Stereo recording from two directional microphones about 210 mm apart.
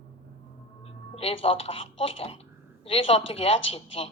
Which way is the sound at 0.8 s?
30° left (ahead or behind).